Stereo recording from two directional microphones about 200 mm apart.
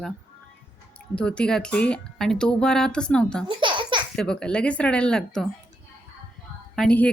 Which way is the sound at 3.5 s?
25° right (ahead or behind).